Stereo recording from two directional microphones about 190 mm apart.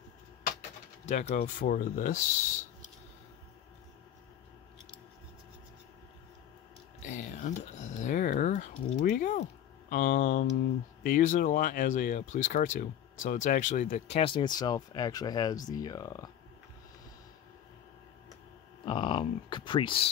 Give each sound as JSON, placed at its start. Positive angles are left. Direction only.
{"t": 1.0, "sound": "speech", "side_deg": 40}
{"t": 7.0, "sound": "a sound", "side_deg": 40}
{"t": 11.0, "sound": "speech", "side_deg": 45}
{"t": 18.9, "sound": "speech", "side_deg": 25}